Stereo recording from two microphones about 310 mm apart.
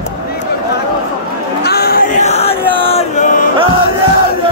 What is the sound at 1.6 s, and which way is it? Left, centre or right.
Chant, left.